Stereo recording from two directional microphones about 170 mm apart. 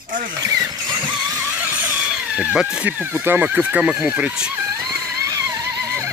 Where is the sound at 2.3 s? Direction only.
5° right (ahead or behind).